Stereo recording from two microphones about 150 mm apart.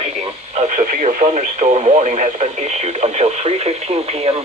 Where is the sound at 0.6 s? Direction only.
55° right (ahead or behind).